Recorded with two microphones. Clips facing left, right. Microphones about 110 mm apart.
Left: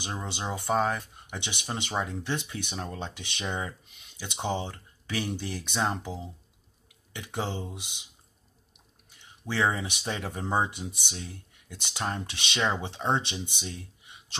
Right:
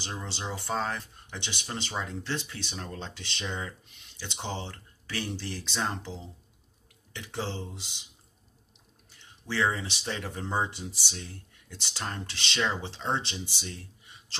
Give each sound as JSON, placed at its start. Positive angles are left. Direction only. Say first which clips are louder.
{"t": 0.0, "sound": "speech", "louder": "left 3 dB", "side_deg": 15}
{"t": 9.6, "sound": "speech", "louder": "left 1 dB", "side_deg": 15}